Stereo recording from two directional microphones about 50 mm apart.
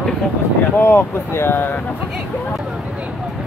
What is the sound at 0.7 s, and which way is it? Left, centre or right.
Speech, left.